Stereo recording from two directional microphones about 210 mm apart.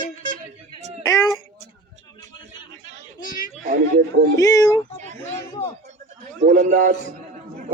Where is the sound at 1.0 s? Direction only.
15° left (ahead or behind).